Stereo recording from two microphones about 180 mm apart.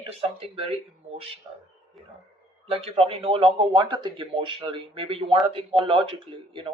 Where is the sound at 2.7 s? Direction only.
35° right (ahead or behind).